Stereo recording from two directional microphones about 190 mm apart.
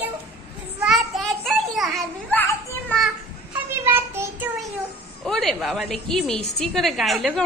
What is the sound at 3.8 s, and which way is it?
Child singing, 10° right (ahead or behind).